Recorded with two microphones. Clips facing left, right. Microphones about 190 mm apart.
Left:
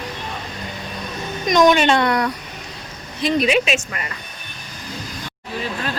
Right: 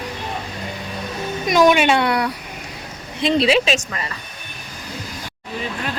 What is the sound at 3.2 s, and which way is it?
Speech, 30° right (ahead or behind).